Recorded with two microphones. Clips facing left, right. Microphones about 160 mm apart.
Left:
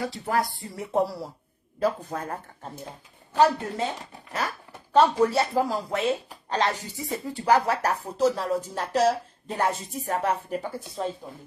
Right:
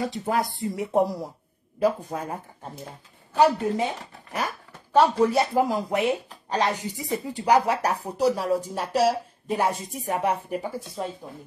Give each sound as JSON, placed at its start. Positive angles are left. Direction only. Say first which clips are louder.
{"t": 0.0, "sound": "speech", "louder": "right 1 dB", "side_deg": -20}